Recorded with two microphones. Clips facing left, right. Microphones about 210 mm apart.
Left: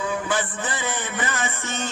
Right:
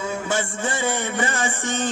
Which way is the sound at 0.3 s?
25° right (ahead or behind).